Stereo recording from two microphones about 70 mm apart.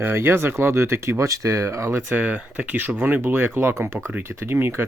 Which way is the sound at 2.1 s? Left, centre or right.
Right.